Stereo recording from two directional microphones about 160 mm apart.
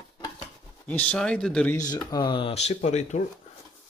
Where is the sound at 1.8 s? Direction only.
20° left (ahead or behind); by 3.3 s 45° left (ahead or behind).